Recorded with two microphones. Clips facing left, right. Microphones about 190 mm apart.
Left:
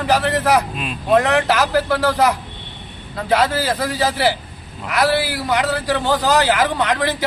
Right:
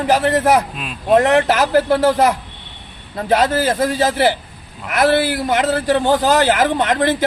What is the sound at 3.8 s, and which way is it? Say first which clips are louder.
Speech: right 3 dB; 45° right (ahead or behind).